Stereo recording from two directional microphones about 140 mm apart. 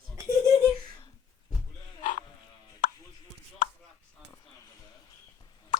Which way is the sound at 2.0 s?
70° left (ahead or behind).